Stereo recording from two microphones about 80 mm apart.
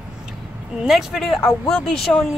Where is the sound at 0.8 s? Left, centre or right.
Centre.